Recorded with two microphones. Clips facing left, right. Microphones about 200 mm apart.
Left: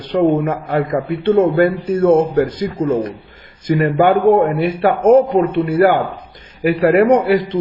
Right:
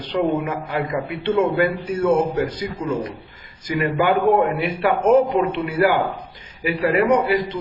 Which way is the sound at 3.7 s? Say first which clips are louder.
Left 6 dB; 35° left (ahead or behind).